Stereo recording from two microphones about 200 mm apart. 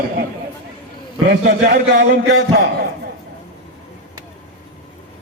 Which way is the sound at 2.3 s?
60° right (ahead or behind).